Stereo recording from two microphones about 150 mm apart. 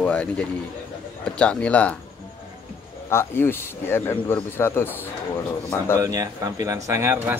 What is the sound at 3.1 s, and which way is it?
A man's voice, 15° left (ahead or behind).